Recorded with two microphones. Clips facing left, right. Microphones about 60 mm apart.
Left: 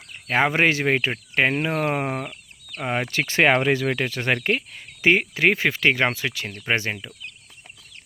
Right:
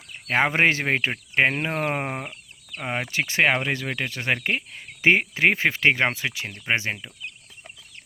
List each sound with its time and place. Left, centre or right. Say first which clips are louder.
0.3 s speech: left 1 dB; right
0.9 s speech: left 2 dB; centre
2.8 s speech: left 2 dB; centre
3.6 s speech: left 6 dB; centre
4.7 s speech: right 1 dB; right